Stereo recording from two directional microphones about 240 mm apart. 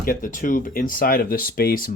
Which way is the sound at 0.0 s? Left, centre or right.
Left.